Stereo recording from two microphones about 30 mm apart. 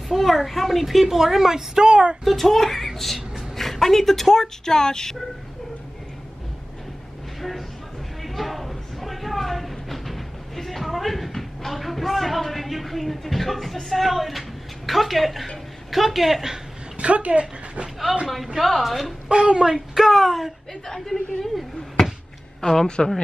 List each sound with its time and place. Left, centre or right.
0.1 s a woman's voice: centre
1.9 s speech: right
2.2 s a woman's voice: centre; by 5.1 s left
8.2 s a sound: centre
13.8 s speech: centre
16.9 s speech: right
18.6 s speech: centre
19.2 s a woman's voice: right
19.7 s speech: centre
20.8 s a woman's voice: centre
22.6 s a woman's voice: centre